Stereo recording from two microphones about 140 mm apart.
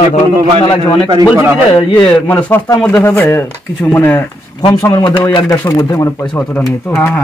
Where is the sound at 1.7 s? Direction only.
40° left (ahead or behind).